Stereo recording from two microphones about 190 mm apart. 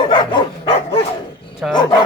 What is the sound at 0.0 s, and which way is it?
Dog, 25° left (ahead or behind).